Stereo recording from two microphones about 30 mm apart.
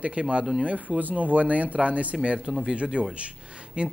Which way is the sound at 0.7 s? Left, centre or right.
Right.